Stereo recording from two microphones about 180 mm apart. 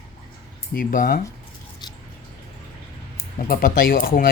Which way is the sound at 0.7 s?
50° left (ahead or behind).